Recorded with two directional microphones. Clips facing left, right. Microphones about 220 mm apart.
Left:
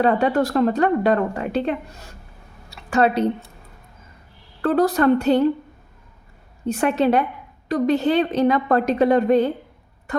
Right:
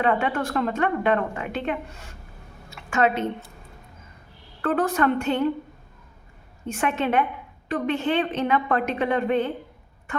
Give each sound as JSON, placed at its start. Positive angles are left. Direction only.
{"t": 0.0, "sound": "a woman's voice", "side_deg": 35}
{"t": 4.6, "sound": "a woman's voice", "side_deg": 35}
{"t": 6.7, "sound": "a woman's voice", "side_deg": 35}